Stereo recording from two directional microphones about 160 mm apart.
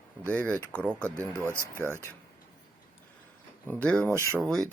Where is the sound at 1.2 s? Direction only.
15° right (ahead or behind).